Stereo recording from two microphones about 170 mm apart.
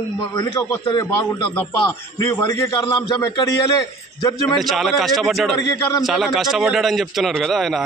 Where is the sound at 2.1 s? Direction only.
20° left (ahead or behind).